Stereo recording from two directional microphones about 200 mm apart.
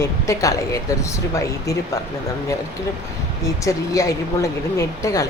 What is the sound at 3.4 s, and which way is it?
Speech, 15° left (ahead or behind).